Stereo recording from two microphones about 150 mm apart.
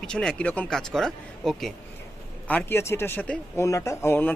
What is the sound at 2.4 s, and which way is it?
Speech, 15° left (ahead or behind).